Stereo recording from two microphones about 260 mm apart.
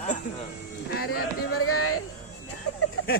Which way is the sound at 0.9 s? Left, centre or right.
Left.